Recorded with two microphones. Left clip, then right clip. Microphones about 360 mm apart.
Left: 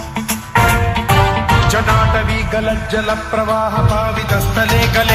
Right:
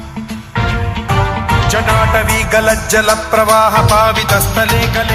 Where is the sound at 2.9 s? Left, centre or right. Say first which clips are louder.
Right 6 dB; right.